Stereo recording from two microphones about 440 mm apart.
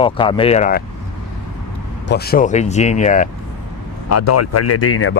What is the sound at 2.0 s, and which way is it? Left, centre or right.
Speech, left.